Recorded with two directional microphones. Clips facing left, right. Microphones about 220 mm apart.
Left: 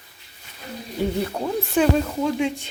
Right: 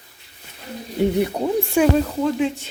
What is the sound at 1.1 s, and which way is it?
Speech, 15° right (ahead or behind).